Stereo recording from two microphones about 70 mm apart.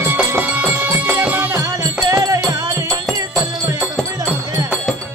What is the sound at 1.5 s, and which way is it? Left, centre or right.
Music, right.